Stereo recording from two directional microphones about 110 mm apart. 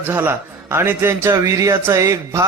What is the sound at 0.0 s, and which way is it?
A man's voice, 20° right (ahead or behind).